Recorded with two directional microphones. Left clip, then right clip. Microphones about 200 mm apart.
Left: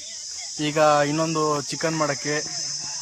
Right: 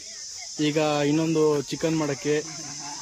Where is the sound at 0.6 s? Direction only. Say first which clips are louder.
Left 5 dB; centre (ahead or behind).